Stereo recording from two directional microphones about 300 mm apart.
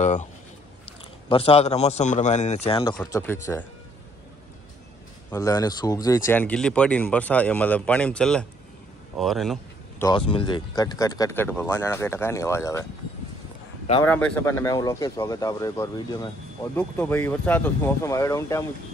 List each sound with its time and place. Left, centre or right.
0.0 s a man's voice: left
1.3 s a man's voice: centre
5.3 s speech: centre
9.1 s a sound: centre
10.0 s speech: centre
14.0 s speech: centre